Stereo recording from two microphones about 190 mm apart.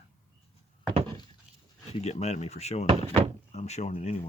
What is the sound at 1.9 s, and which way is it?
Speech, 35° left (ahead or behind).